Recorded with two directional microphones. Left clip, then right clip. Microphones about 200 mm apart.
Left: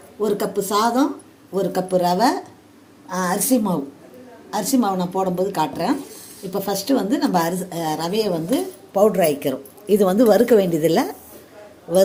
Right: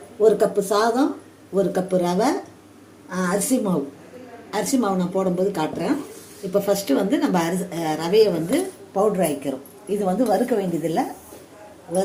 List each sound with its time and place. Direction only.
0.2 s a woman's voice: 40° left (ahead or behind); by 11.0 s 55° left (ahead or behind)